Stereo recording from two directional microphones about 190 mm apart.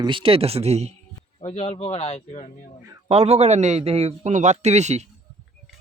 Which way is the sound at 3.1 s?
35° right (ahead or behind).